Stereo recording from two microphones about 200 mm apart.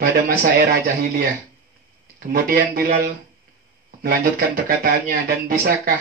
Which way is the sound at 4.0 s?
50° right (ahead or behind).